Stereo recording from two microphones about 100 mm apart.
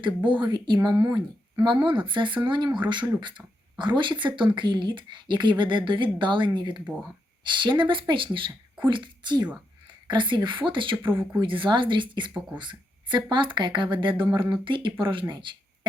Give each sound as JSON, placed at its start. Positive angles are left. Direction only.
{"t": 0.3, "sound": "speech", "side_deg": -50}
{"t": 11.1, "sound": "speech", "side_deg": -25}
{"t": 11.3, "sound": "speech", "side_deg": -55}
{"t": 13.3, "sound": "speech", "side_deg": -55}